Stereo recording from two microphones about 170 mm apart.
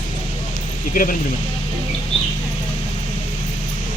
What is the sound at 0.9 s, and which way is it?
Speech, 55° left (ahead or behind).